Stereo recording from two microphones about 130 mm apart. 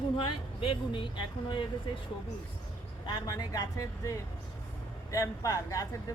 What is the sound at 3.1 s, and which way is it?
Speech, 30° left (ahead or behind).